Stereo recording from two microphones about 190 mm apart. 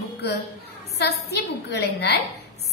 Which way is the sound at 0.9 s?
60° left (ahead or behind).